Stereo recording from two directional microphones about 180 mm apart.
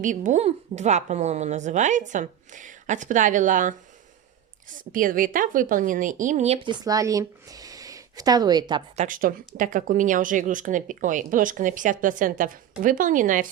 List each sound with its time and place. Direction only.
0.0 s speech: 45° right (ahead or behind)
4.8 s a woman's voice: 50° right (ahead or behind); by 8.8 s 25° right (ahead or behind)
9.0 s speech: 50° right (ahead or behind)